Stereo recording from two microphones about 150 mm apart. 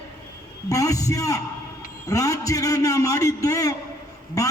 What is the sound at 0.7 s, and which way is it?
A man's voice, 20° left (ahead or behind).